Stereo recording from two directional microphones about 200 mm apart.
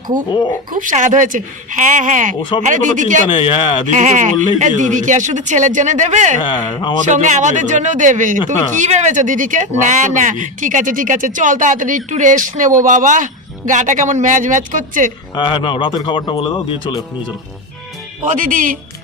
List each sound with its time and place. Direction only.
0.3 s speech: 20° left (ahead or behind)
0.7 s speech: 40° right (ahead or behind)
3.2 s speech: 25° left (ahead or behind)
3.9 s speech: 35° right (ahead or behind)
6.4 s speech: 25° left (ahead or behind)
7.0 s speech: 40° right (ahead or behind)
15.4 s speech: 25° left (ahead or behind)
18.3 s speech: 40° right (ahead or behind)